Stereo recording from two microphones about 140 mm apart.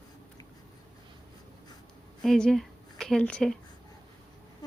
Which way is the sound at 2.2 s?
5° left (ahead or behind).